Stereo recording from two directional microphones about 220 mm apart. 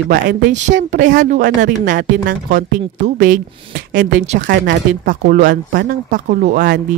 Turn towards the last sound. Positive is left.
turn(degrees=-45)  # may be behind; listen again after turning